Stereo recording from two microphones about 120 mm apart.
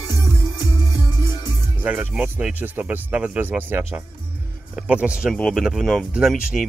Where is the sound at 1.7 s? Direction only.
15° right (ahead or behind).